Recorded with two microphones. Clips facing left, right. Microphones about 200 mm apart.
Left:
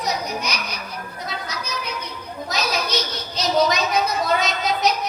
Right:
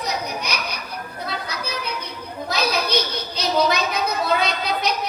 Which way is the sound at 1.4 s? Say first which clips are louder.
Right 1 dB; 60° right (ahead or behind).